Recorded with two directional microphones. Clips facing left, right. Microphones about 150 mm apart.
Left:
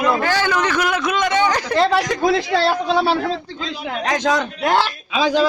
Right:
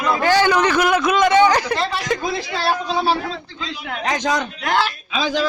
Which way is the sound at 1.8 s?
75° left (ahead or behind).